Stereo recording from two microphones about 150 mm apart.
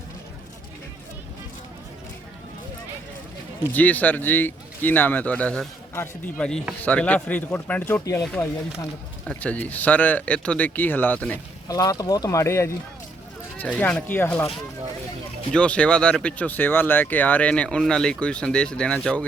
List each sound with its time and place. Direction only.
3.7 s speech: 10° left (ahead or behind)
8.2 s speech: 5° left (ahead or behind)
11.7 s speech: 25° left (ahead or behind)
15.5 s speech: 5° left (ahead or behind)